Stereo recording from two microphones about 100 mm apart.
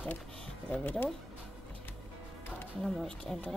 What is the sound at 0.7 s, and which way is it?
Speech, 15° left (ahead or behind).